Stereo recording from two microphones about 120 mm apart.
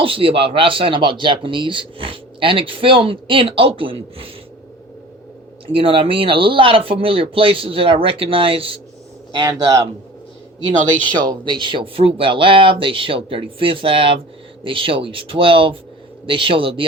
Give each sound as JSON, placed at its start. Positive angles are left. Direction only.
{"t": 0.0, "sound": "speech", "side_deg": -45}
{"t": 5.7, "sound": "speech", "side_deg": -45}
{"t": 9.3, "sound": "speech", "side_deg": -35}
{"t": 11.0, "sound": "speech", "side_deg": -40}